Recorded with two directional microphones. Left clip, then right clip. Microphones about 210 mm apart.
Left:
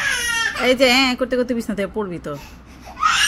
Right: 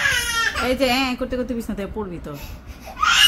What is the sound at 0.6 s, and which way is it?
Speech, 15° left (ahead or behind).